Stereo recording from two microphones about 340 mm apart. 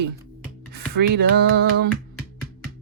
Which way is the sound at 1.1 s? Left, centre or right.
Right.